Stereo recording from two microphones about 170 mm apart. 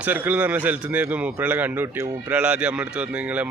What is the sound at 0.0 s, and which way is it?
A man's voice, 10° right (ahead or behind).